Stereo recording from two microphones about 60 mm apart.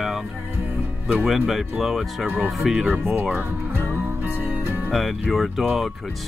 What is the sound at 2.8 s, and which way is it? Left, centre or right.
Speech, right.